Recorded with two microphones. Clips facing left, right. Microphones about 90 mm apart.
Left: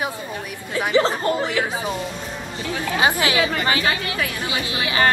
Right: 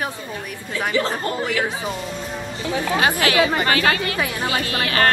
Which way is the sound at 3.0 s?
20° left (ahead or behind).